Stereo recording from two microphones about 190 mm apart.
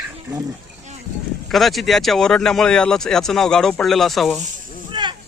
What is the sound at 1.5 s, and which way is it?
Speech, centre (ahead or behind).